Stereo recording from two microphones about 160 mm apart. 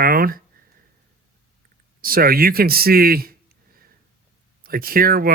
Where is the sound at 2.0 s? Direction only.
65° right (ahead or behind).